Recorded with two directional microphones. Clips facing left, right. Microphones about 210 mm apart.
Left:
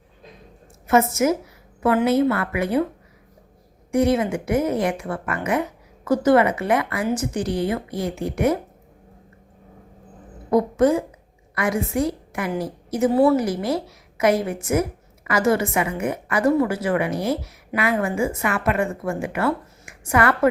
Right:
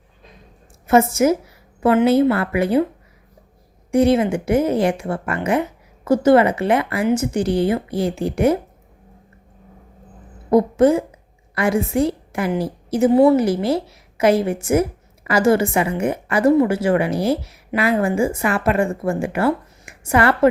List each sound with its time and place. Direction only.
0.9 s a woman's voice: 30° right (ahead or behind)
3.9 s a woman's voice: 30° right (ahead or behind)
10.5 s a woman's voice: 30° right (ahead or behind)